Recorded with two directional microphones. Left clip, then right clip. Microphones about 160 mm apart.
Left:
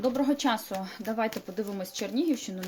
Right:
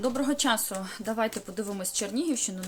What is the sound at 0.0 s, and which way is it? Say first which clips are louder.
Speech: left 1 dB; 15° right (ahead or behind).